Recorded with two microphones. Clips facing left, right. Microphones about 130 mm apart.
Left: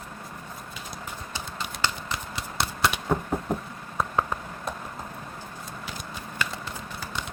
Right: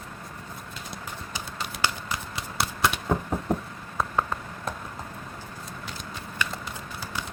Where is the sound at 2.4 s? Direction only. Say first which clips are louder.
Even; centre (ahead or behind).